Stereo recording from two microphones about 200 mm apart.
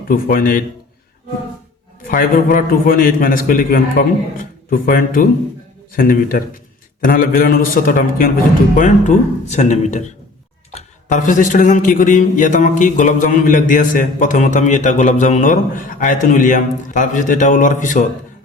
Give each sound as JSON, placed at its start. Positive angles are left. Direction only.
{"t": 0.1, "sound": "a man's voice", "side_deg": 45}
{"t": 2.0, "sound": "a man's voice", "side_deg": 45}